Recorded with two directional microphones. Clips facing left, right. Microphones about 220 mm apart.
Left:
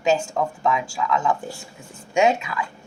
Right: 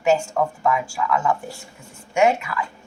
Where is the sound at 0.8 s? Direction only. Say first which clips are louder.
Right 1 dB; 15° left (ahead or behind).